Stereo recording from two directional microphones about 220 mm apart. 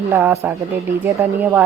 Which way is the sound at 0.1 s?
10° right (ahead or behind).